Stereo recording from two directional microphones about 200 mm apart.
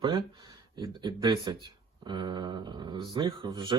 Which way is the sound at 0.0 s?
25° right (ahead or behind).